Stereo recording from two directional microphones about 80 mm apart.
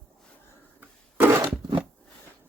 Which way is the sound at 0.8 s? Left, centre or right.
Right.